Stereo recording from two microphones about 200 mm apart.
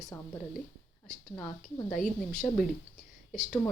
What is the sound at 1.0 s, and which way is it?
A woman's voice, 5° left (ahead or behind).